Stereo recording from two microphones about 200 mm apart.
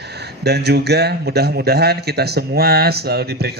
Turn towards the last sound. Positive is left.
turn(degrees=-55)  # may be behind; listen again after turning